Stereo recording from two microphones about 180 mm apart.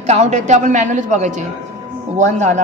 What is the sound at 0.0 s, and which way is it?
A woman's voice, 40° right (ahead or behind).